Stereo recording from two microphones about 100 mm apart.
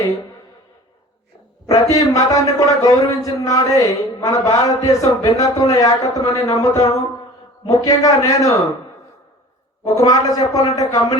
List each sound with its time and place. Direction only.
1.6 s a man's voice: 35° left (ahead or behind)
9.8 s a man's voice: 35° left (ahead or behind)